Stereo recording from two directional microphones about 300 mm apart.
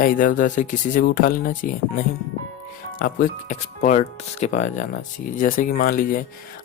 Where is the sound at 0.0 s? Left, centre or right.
Left.